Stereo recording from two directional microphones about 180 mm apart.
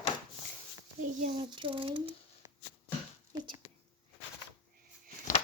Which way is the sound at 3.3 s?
25° right (ahead or behind).